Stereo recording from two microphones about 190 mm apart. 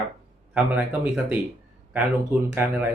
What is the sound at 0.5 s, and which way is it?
Speech, 5° right (ahead or behind).